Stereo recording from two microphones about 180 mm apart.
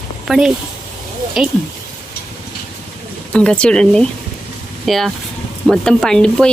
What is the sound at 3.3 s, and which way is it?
Speech, 5° left (ahead or behind).